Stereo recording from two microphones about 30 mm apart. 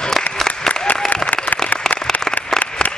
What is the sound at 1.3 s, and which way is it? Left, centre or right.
Applause, left.